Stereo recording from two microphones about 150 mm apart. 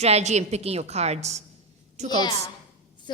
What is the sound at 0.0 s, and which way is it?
A woman's voice, 45° right (ahead or behind).